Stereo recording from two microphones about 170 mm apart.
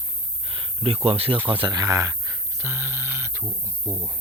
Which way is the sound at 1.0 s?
35° right (ahead or behind).